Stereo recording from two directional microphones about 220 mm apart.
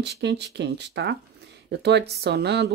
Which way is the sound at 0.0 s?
50° right (ahead or behind).